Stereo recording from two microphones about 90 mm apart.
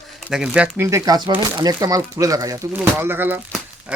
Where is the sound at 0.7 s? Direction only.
35° right (ahead or behind).